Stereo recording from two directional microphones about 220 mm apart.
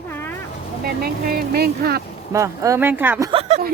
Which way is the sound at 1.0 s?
45° right (ahead or behind).